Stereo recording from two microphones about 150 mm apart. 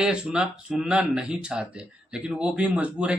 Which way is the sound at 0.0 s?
5° right (ahead or behind).